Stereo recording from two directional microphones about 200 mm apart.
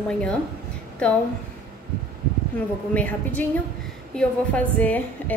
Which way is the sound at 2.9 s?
10° left (ahead or behind).